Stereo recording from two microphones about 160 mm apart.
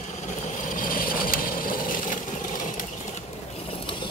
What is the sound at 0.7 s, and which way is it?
Vehicle, 60° left (ahead or behind).